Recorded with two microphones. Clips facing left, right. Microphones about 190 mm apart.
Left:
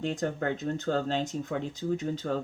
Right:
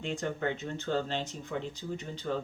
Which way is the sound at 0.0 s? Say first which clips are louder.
Left 3 dB; 40° left (ahead or behind).